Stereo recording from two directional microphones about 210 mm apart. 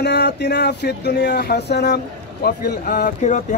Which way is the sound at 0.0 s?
55° left (ahead or behind).